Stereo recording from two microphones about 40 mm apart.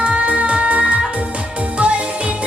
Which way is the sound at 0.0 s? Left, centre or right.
Right.